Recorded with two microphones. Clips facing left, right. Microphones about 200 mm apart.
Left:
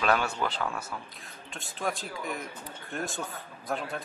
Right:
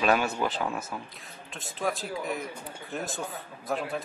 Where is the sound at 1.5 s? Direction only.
Centre (ahead or behind).